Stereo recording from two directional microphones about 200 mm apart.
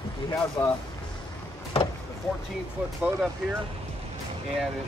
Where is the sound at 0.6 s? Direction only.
20° left (ahead or behind).